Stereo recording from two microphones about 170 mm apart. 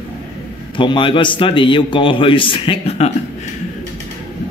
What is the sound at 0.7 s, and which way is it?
A man's voice, 30° left (ahead or behind).